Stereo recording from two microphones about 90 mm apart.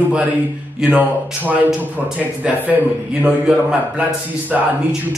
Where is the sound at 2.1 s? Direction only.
20° right (ahead or behind).